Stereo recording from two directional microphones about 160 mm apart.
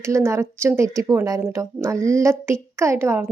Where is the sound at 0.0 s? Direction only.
15° right (ahead or behind).